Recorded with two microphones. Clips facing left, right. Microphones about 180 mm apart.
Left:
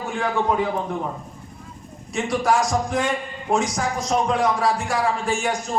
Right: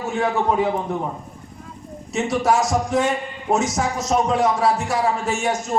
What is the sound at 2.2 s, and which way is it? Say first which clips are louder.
A man's voice: right 1 dB; 25° right (ahead or behind).